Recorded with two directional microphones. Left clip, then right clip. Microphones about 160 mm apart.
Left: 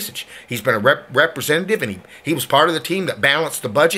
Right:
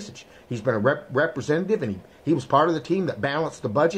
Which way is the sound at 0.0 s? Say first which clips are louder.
Left 12 dB; 15° left (ahead or behind).